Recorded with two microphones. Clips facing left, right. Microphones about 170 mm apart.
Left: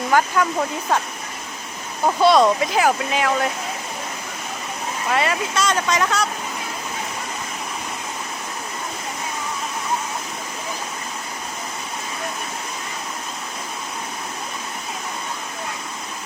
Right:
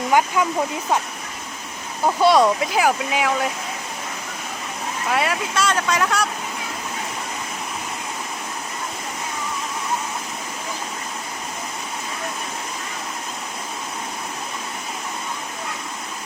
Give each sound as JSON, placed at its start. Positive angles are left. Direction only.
{"t": 0.1, "sound": "speech", "side_deg": -15}
{"t": 2.2, "sound": "speech", "side_deg": -10}
{"t": 5.1, "sound": "speech", "side_deg": -5}